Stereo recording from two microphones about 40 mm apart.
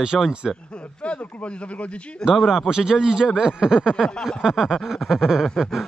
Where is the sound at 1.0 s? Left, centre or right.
Left.